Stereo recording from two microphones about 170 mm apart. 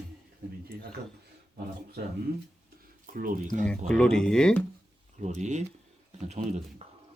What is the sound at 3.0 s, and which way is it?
Speech, 55° right (ahead or behind).